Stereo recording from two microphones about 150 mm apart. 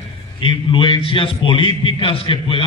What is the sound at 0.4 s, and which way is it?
A man's voice, 35° left (ahead or behind).